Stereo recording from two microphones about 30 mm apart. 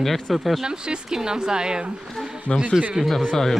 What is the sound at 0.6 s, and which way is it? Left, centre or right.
Speech, right.